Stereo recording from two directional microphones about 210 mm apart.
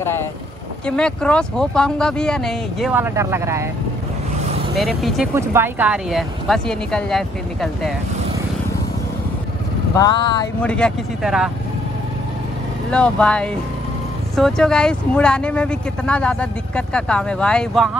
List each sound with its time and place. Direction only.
0.8 s speech: 5° left (ahead or behind)
2.9 s speech: 10° right (ahead or behind)
4.7 s speech: centre (ahead or behind)
5.3 s speech: 10° right (ahead or behind)
9.9 s vehicle: 20° left (ahead or behind)
10.6 s speech: 5° left (ahead or behind)
12.9 s speech: 5° left (ahead or behind)